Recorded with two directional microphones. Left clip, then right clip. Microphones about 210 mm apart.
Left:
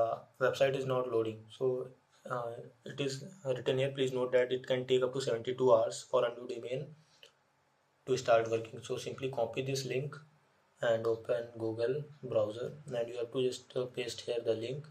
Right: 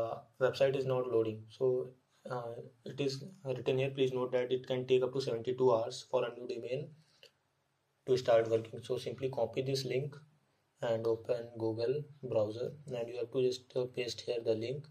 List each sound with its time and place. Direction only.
0.0 s a sound: 25° right (ahead or behind)
2.2 s speech: 25° right (ahead or behind)
11.2 s speech: 25° right (ahead or behind)